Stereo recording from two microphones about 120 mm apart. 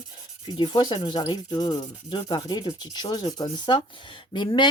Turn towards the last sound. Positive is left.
turn(degrees=40)  # may be behind; listen again after turning